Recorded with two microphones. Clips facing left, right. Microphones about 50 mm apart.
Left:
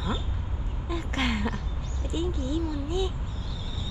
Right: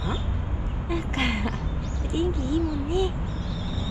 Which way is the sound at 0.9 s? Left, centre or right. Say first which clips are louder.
Right 2 dB; right.